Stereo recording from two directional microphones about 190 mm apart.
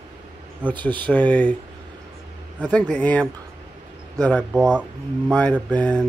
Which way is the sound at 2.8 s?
5° left (ahead or behind).